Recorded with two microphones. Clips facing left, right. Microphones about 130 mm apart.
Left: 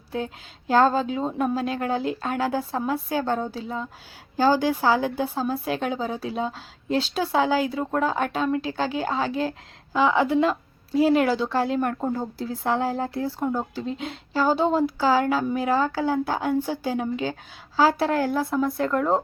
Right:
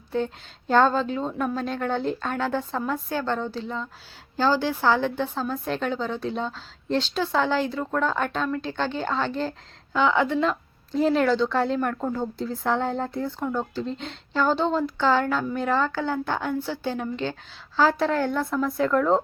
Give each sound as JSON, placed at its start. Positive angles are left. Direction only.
{"t": 0.7, "sound": "speech", "side_deg": 5}
{"t": 1.3, "sound": "speech", "side_deg": 25}
{"t": 1.5, "sound": "a woman's voice", "side_deg": 5}